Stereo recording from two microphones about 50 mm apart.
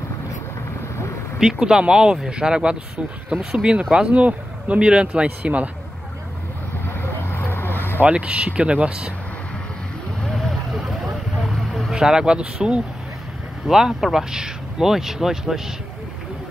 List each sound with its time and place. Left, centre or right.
1.4 s speech: centre
4.1 s speech: right
6.9 s vehicle: left
8.0 s speech: right
10.2 s vehicle: centre
11.9 s speech: centre